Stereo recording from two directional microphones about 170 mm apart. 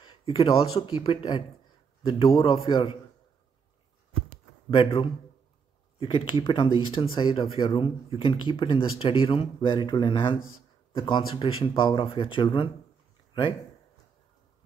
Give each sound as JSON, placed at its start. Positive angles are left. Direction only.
{"t": 0.0, "sound": "speech", "side_deg": 30}
{"t": 2.4, "sound": "speech", "side_deg": 35}
{"t": 4.6, "sound": "speech", "side_deg": 30}